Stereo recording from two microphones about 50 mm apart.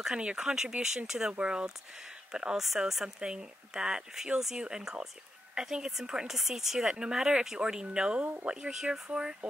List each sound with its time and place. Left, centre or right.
0.2 s speech: centre